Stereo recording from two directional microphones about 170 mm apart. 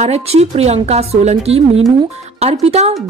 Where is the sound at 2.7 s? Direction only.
40° right (ahead or behind).